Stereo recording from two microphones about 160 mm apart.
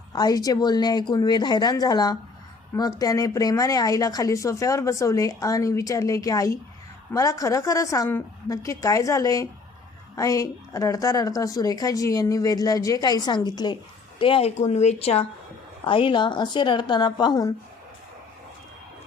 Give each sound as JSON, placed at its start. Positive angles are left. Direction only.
{"t": 0.1, "sound": "a woman's voice", "side_deg": 25}